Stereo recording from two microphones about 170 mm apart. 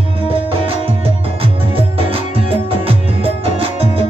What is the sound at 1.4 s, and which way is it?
Music, 35° right (ahead or behind).